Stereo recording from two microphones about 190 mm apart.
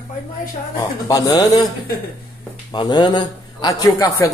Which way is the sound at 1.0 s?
20° left (ahead or behind).